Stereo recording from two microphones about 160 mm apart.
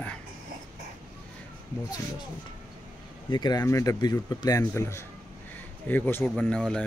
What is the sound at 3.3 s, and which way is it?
Speech, 25° left (ahead or behind).